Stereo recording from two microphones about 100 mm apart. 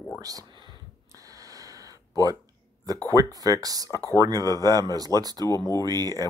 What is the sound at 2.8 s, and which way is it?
Speech, 35° right (ahead or behind).